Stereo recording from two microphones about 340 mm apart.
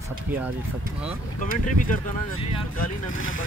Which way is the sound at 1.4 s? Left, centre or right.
Left.